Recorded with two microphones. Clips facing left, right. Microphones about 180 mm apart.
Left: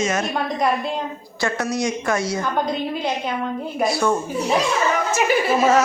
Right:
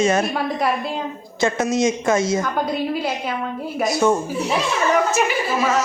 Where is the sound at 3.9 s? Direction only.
20° right (ahead or behind).